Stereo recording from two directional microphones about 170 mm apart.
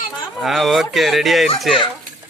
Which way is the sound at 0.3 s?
Centre (ahead or behind).